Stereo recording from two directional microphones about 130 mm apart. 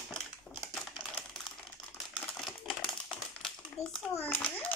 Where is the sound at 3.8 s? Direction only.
55° left (ahead or behind).